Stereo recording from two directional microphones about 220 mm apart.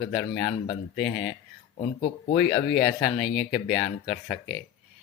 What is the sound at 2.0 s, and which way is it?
Speech, 25° left (ahead or behind).